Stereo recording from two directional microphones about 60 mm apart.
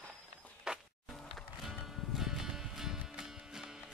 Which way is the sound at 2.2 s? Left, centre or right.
Centre.